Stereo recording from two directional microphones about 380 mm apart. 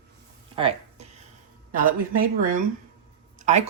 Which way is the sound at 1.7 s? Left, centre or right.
Right.